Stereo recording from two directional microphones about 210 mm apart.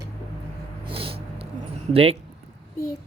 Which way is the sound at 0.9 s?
25° right (ahead or behind).